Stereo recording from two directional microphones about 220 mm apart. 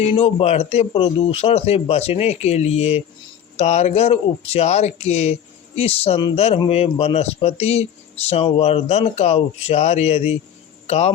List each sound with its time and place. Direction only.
0.1 s speech: 25° left (ahead or behind)